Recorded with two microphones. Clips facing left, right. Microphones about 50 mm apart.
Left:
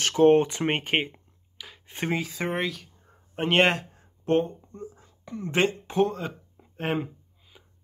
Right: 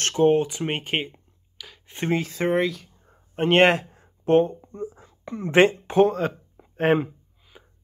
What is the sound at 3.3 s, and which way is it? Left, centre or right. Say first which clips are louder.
A man's voice: right 4 dB; centre.